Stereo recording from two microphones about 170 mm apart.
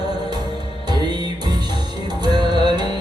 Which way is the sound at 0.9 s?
25° right (ahead or behind).